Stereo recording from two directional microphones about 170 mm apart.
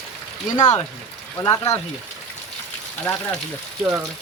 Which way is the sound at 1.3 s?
15° left (ahead or behind).